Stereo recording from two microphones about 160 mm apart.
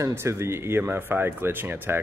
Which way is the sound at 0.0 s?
15° right (ahead or behind).